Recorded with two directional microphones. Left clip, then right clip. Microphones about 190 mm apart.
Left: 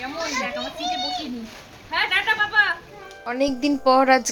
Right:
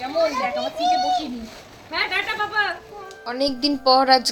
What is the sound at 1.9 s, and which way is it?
A woman's voice, 15° left (ahead or behind).